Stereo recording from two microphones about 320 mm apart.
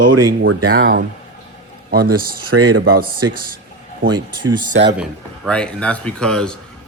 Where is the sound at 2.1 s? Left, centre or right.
Right.